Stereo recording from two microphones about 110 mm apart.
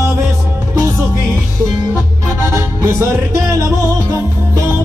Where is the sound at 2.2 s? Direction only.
25° right (ahead or behind).